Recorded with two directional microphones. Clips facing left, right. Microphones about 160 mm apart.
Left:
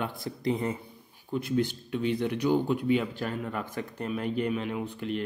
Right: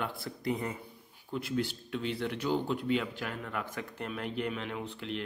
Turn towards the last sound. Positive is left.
turn(degrees=15)  # may be behind; listen again after turning